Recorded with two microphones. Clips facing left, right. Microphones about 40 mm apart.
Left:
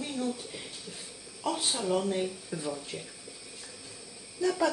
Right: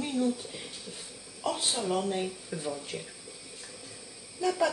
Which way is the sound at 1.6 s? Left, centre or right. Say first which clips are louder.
Left 1 dB; centre.